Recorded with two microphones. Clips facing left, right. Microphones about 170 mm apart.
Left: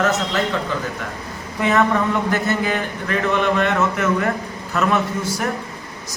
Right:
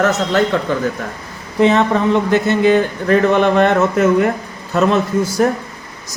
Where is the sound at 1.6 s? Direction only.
25° right (ahead or behind).